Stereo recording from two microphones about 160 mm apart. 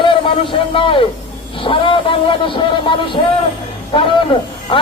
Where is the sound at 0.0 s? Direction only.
30° left (ahead or behind).